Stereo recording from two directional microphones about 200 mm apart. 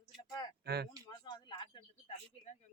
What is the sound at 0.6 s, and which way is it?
Speech, 55° right (ahead or behind).